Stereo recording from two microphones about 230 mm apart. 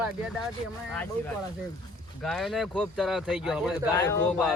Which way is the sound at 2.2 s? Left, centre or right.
Centre.